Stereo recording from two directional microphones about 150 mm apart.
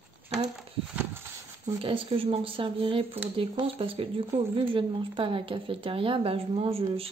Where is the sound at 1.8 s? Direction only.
35° right (ahead or behind).